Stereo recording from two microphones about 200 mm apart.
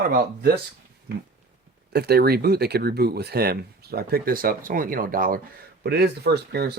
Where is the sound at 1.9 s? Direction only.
50° right (ahead or behind).